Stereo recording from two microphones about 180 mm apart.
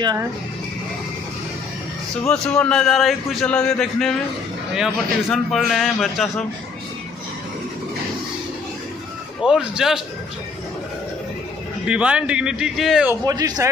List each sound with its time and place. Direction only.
0.0 s speech: 20° right (ahead or behind)
2.2 s a man's voice: 5° left (ahead or behind)
9.4 s a man's voice: 5° right (ahead or behind)
11.8 s a man's voice: 5° right (ahead or behind)
13.2 s speech: 20° right (ahead or behind)